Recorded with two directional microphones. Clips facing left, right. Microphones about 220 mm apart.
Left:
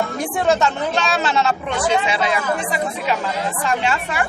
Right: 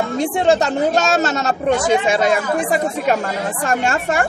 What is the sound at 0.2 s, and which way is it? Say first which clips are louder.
Speech: right 4 dB; 25° right (ahead or behind).